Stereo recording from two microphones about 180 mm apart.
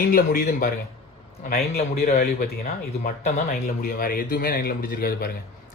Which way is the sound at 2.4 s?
55° left (ahead or behind).